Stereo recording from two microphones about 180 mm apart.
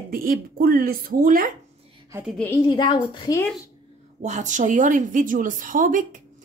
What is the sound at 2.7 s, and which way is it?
Speech, 25° left (ahead or behind).